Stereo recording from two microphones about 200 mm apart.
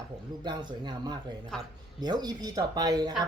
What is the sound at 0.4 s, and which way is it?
Speech, 20° right (ahead or behind).